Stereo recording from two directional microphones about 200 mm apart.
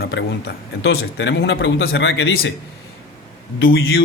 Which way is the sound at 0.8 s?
60° left (ahead or behind).